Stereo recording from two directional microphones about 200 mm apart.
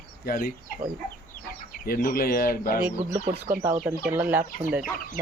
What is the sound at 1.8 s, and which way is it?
Speech, 50° left (ahead or behind).